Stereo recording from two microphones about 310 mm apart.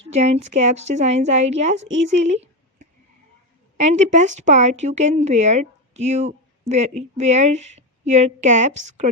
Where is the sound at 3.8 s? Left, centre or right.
Right.